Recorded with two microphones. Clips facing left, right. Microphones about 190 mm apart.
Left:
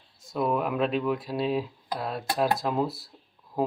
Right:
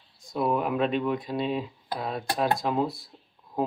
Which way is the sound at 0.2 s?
Centre (ahead or behind).